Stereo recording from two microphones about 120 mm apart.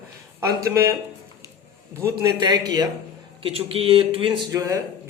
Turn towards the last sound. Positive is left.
turn(degrees=-30)  # may be behind; listen again after turning